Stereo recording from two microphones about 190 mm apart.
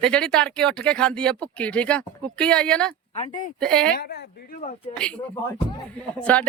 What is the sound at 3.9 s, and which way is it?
Speech, 60° left (ahead or behind).